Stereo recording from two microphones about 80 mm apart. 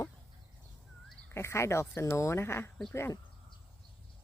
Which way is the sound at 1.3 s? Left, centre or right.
Left.